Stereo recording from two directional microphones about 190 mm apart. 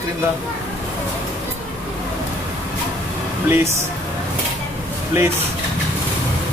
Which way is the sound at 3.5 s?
15° right (ahead or behind).